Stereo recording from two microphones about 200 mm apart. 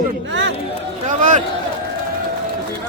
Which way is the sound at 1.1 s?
40° right (ahead or behind).